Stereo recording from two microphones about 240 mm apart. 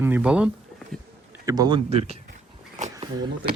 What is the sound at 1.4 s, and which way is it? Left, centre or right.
Speech, centre.